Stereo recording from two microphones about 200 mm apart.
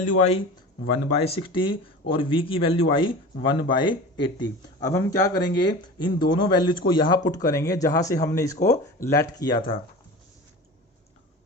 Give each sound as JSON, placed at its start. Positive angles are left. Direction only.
{"t": 0.0, "sound": "speech", "side_deg": 30}